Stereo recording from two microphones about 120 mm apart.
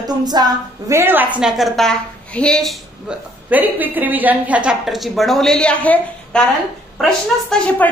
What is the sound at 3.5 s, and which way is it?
A woman's voice, 15° right (ahead or behind).